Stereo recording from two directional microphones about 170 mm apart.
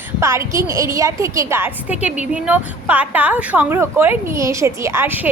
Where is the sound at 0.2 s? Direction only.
15° right (ahead or behind).